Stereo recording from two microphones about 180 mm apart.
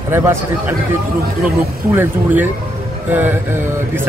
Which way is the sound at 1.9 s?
10° right (ahead or behind).